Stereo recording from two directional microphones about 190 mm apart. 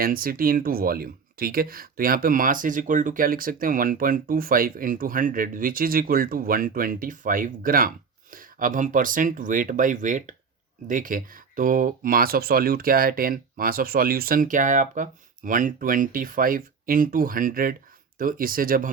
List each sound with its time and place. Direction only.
0.0 s speech: 50° right (ahead or behind)